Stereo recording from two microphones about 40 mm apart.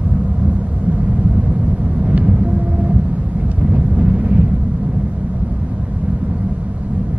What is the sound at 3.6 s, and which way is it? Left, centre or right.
Wind noise, right.